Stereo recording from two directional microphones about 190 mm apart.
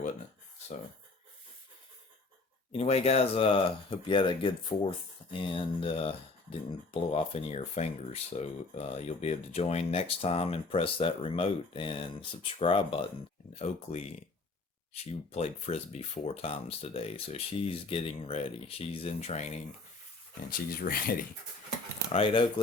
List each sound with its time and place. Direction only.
2.7 s speech: 30° left (ahead or behind)
20.5 s speech: 50° left (ahead or behind)
22.1 s speech: 25° left (ahead or behind)